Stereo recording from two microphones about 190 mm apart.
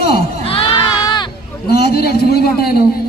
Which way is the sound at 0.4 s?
30° left (ahead or behind).